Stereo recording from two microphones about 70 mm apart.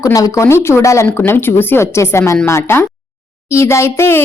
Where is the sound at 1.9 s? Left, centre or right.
Left.